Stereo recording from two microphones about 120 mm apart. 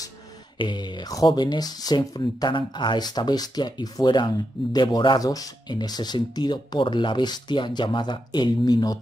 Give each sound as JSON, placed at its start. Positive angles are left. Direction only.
{"t": 0.6, "sound": "speech", "side_deg": 40}